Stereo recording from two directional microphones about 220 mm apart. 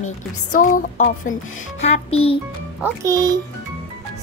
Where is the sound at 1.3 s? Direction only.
65° left (ahead or behind).